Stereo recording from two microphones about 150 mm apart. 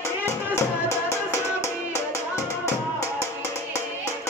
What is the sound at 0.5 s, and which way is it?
Music, 20° left (ahead or behind).